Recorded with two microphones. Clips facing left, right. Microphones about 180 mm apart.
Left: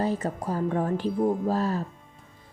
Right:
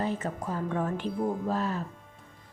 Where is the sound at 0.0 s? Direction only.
35° left (ahead or behind).